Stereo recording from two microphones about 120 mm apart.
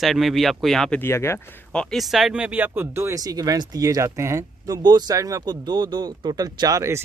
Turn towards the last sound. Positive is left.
turn(degrees=-25)  # may be behind; listen again after turning